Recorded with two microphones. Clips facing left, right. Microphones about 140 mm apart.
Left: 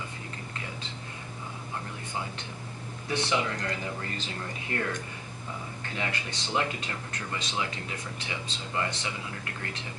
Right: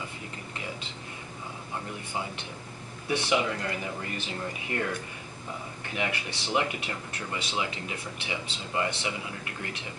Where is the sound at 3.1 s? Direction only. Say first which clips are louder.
Right 2 dB; 15° right (ahead or behind).